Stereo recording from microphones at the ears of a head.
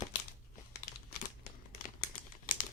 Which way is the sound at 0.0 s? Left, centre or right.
Left.